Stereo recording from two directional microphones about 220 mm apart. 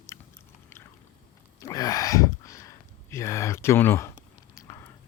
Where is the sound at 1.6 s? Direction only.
15° left (ahead or behind).